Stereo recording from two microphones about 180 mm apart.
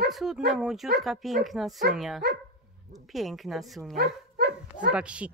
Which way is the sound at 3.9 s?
60° right (ahead or behind).